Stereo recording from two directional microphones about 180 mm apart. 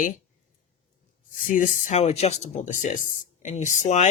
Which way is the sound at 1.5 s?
45° left (ahead or behind).